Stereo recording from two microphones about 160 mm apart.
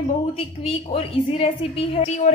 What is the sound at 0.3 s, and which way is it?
A woman's voice, 40° left (ahead or behind).